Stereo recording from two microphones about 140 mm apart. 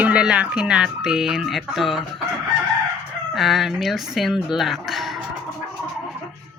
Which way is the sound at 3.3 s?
Centre (ahead or behind).